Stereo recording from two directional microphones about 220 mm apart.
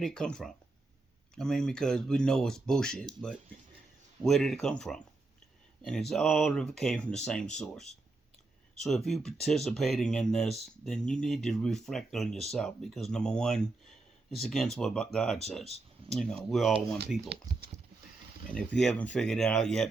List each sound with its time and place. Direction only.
0.0 s speech: 5° left (ahead or behind)
4.2 s speech: centre (ahead or behind)
17.5 s horse: 15° right (ahead or behind)
18.5 s speech: 5° left (ahead or behind)